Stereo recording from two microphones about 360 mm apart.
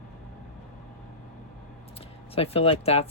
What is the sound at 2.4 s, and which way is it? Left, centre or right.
Speech, centre.